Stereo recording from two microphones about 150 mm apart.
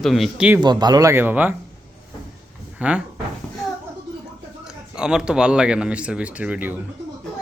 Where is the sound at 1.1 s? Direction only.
10° right (ahead or behind).